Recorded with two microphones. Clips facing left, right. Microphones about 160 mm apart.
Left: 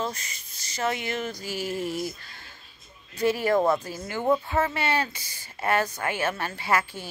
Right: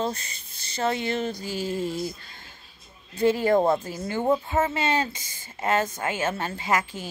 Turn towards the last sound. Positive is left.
turn(degrees=-15)  # may be behind; listen again after turning